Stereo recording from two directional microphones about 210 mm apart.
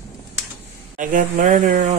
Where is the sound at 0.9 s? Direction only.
40° right (ahead or behind).